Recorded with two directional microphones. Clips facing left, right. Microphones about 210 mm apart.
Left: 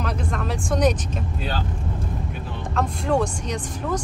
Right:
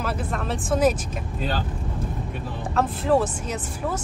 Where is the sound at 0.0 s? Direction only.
Centre (ahead or behind).